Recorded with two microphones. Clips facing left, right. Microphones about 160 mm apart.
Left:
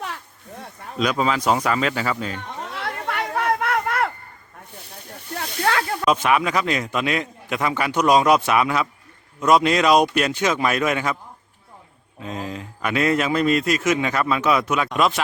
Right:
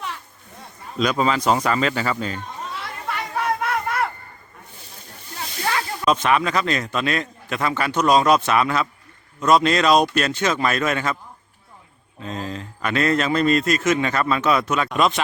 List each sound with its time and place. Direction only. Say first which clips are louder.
0.9 s speech: right 1 dB; 5° left (ahead or behind)
2.3 s chatter: even; 75° left (ahead or behind)
5.3 s snake: left 3 dB; 65° left (ahead or behind)
6.1 s a man's voice: right 1 dB; 10° left (ahead or behind)
12.2 s a man's voice: even; 10° left (ahead or behind)